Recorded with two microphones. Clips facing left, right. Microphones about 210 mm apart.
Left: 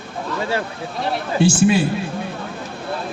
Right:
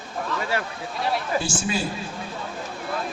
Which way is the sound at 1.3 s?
65° left (ahead or behind).